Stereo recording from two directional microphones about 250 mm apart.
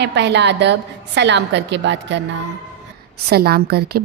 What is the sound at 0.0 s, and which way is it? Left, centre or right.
A woman's voice, right.